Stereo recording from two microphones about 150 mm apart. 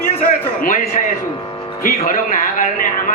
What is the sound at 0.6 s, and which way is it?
Speech, 65° left (ahead or behind).